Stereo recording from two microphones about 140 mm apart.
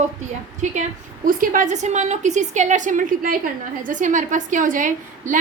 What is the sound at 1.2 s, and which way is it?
A woman's voice, 75° right (ahead or behind).